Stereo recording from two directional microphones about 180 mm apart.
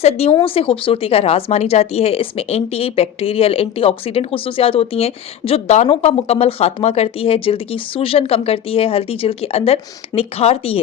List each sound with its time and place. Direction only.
0.0 s speech: 35° left (ahead or behind)